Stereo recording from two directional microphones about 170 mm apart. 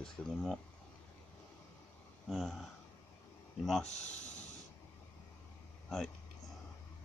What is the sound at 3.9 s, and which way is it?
Speech, 45° left (ahead or behind).